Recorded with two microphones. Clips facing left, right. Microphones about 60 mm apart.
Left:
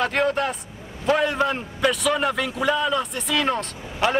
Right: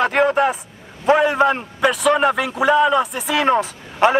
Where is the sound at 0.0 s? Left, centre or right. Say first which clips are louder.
Right 6 dB; centre.